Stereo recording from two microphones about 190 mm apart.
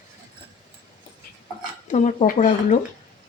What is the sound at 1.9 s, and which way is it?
Speech, 40° left (ahead or behind).